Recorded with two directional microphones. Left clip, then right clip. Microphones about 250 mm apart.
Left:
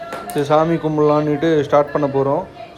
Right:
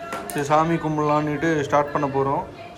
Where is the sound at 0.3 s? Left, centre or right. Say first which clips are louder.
Left 4 dB; centre.